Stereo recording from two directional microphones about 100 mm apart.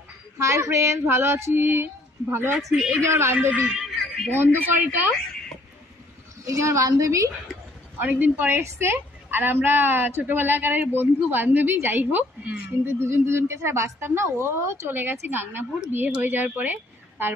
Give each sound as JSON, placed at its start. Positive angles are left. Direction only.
{"t": 0.4, "sound": "a woman's voice", "side_deg": -30}
{"t": 2.5, "sound": "a woman's voice", "side_deg": -5}
{"t": 3.7, "sound": "a sound", "side_deg": -5}
{"t": 6.4, "sound": "a woman's voice", "side_deg": -30}
{"t": 8.0, "sound": "a woman's voice", "side_deg": -20}